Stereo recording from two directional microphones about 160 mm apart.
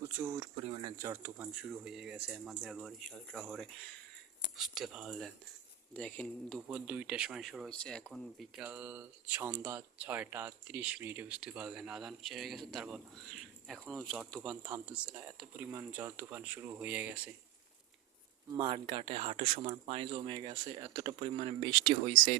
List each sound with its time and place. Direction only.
0.0 s speech: 15° right (ahead or behind)
0.5 s speech: 35° right (ahead or behind)
1.0 s speech: 10° right (ahead or behind); by 6.6 s 5° left (ahead or behind)
6.7 s speech: 10° right (ahead or behind)
18.5 s speech: 30° right (ahead or behind)